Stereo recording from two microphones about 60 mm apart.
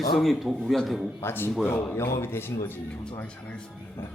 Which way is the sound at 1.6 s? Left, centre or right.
Left.